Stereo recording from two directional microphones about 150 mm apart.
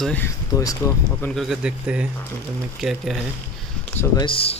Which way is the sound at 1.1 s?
5° left (ahead or behind).